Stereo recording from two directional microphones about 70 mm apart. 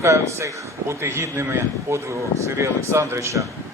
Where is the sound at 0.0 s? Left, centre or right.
Right.